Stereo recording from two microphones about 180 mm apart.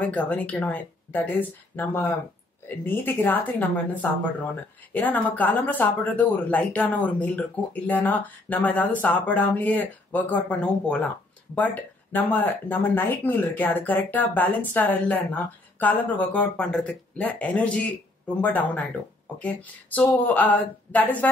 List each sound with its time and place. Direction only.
0.0 s speech: 10° left (ahead or behind)